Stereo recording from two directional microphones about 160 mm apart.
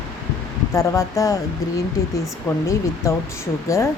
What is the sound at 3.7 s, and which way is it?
Speech, 20° left (ahead or behind).